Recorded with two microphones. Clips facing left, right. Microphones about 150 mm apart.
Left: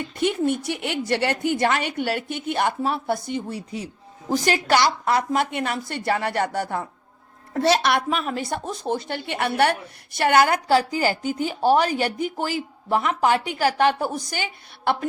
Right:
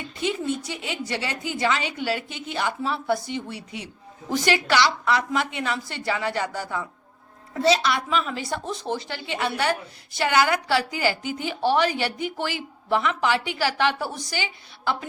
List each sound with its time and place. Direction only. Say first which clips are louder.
0.2 s a woman's voice: left 4 dB; 55° left (ahead or behind)